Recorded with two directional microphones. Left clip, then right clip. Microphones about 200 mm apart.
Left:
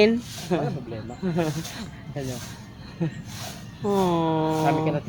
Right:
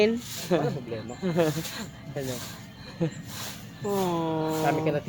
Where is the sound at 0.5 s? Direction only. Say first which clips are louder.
Right 1 dB; 55° right (ahead or behind).